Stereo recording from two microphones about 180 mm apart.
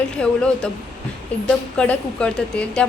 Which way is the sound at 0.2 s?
5° left (ahead or behind).